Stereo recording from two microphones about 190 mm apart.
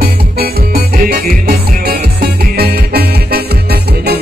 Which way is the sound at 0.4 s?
55° right (ahead or behind).